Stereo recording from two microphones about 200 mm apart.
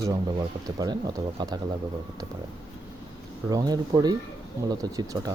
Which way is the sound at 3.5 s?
20° right (ahead or behind).